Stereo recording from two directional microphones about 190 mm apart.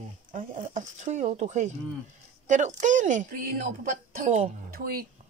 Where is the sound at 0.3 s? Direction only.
40° right (ahead or behind).